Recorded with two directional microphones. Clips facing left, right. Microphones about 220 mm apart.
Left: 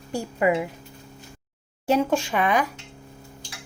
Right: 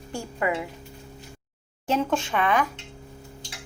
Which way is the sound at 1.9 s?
10° left (ahead or behind).